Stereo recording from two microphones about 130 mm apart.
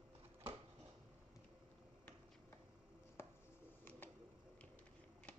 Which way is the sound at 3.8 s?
15° left (ahead or behind).